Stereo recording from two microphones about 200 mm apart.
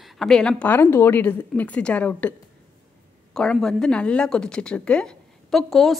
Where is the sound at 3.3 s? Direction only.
5° left (ahead or behind).